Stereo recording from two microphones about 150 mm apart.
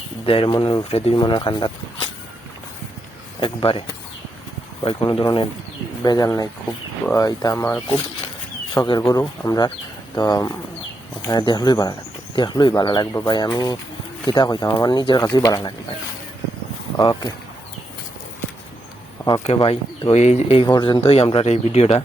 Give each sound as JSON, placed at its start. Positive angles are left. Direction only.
{"t": 0.3, "sound": "speech", "side_deg": 40}
{"t": 0.5, "sound": "speech", "side_deg": 30}
{"t": 1.2, "sound": "speech", "side_deg": 30}
{"t": 3.4, "sound": "speech", "side_deg": 35}
{"t": 17.0, "sound": "speech", "side_deg": 30}
{"t": 19.5, "sound": "speech", "side_deg": 40}
{"t": 20.7, "sound": "speech", "side_deg": 30}